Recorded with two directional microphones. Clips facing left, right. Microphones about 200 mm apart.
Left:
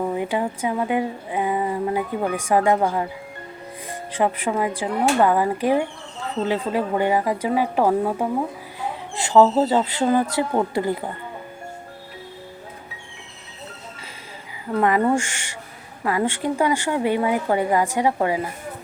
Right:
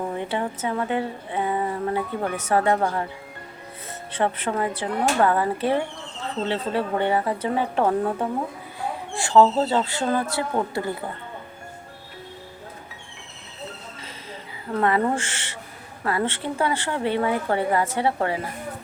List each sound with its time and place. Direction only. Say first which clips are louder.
0.1 s speech: left 3 dB; 10° left (ahead or behind)
9.1 s speech: left 2 dB; 20° left (ahead or behind)
14.8 s speech: left 3 dB; 15° left (ahead or behind)